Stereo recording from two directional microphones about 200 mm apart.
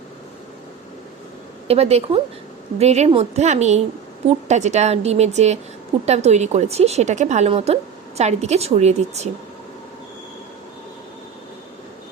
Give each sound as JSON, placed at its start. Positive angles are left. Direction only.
{"t": 1.6, "sound": "a woman's voice", "side_deg": -30}